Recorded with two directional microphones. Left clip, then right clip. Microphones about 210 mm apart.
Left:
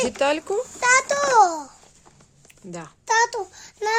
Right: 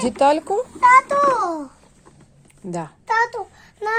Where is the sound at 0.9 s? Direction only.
50° left (ahead or behind).